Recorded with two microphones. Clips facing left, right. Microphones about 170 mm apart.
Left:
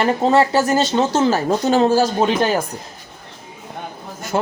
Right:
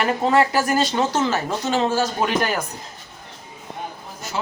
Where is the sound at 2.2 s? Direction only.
25° left (ahead or behind).